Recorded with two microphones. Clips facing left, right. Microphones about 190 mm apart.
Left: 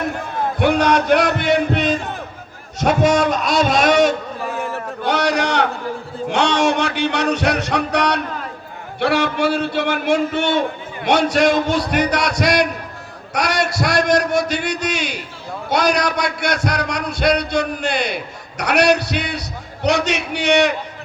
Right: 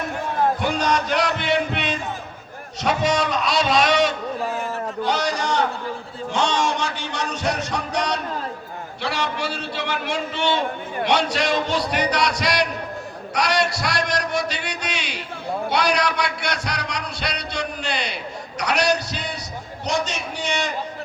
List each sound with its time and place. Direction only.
0.6 s music: 65° left (ahead or behind); by 2.0 s 40° left (ahead or behind)
2.8 s a man's voice: 50° left (ahead or behind)
5.0 s a sound: 65° left (ahead or behind)
6.3 s music: 65° left (ahead or behind)
19.8 s a man's voice: 70° left (ahead or behind)